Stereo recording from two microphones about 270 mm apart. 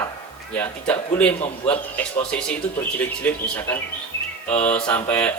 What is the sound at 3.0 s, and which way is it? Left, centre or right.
A man's voice, centre.